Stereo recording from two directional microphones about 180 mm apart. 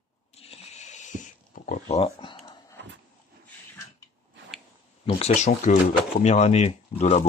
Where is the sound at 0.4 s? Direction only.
35° left (ahead or behind).